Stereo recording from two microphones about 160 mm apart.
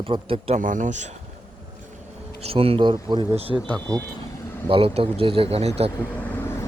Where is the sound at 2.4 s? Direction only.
35° right (ahead or behind).